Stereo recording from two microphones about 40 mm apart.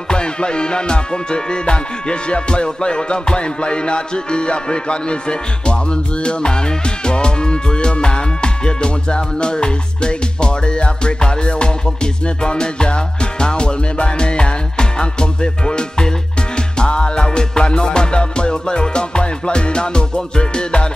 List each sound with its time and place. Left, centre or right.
0.1 s music: left